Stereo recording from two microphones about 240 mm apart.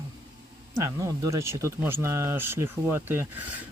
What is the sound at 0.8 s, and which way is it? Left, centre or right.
Speech, centre.